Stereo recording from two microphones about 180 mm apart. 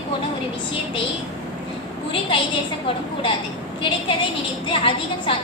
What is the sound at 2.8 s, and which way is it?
Speech, 30° left (ahead or behind).